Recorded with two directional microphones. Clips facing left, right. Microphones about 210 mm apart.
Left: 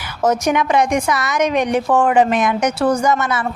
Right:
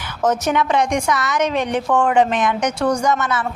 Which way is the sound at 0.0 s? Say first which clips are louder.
Left 2 dB; 10° left (ahead or behind).